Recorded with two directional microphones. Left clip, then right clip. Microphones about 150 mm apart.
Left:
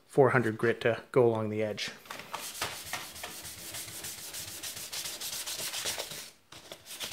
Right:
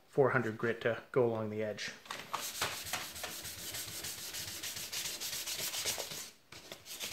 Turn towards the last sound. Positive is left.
turn(degrees=10)  # may be behind; listen again after turning